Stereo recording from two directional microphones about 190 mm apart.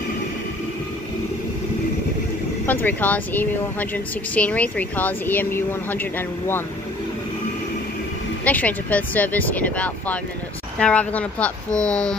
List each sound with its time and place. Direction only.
2.6 s a woman's voice: 10° left (ahead or behind)
8.5 s a woman's voice: 10° left (ahead or behind)